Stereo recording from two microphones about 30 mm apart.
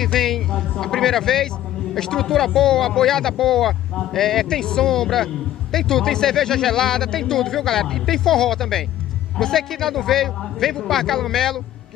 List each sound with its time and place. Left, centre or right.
0.0 s speech: centre